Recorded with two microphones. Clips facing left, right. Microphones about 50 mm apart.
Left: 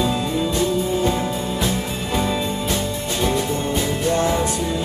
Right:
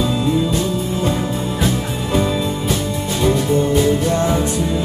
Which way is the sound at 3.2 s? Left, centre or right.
Centre.